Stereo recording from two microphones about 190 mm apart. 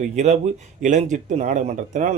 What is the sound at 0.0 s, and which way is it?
Speech, 40° right (ahead or behind).